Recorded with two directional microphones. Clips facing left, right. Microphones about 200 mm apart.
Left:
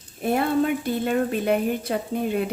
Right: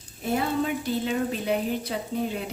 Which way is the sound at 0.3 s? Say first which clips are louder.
Left 4 dB; 55° left (ahead or behind).